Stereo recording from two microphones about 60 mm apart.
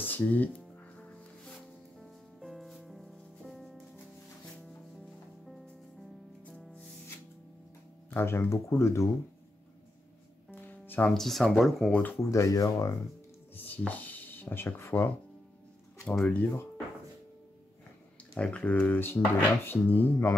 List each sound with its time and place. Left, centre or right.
0.0 s music: left
2.0 s music: centre
5.0 s music: centre
8.1 s speech: left
8.5 s speech: left
10.5 s music: left
11.1 s speech: centre
12.2 s speech: left
13.6 s a sound: left
16.3 s speech: left
18.3 s speech: centre
18.8 s speech: left